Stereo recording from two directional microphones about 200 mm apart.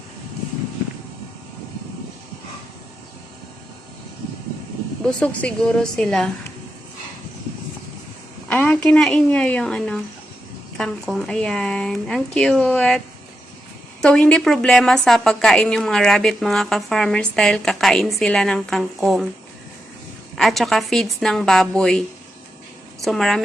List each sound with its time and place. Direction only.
5.0 s a woman's voice: 5° left (ahead or behind)
8.4 s a woman's voice: 5° left (ahead or behind)
14.0 s a woman's voice: 5° left (ahead or behind)
20.3 s a woman's voice: centre (ahead or behind)